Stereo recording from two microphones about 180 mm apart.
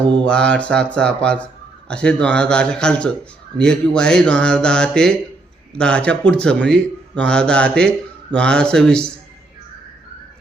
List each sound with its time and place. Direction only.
0.3 s speech: 5° left (ahead or behind)